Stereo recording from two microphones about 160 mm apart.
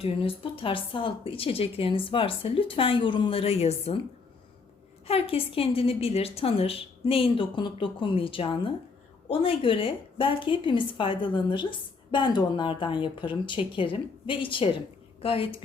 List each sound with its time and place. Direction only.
0.0 s speech: 35° left (ahead or behind)
5.0 s speech: 40° left (ahead or behind)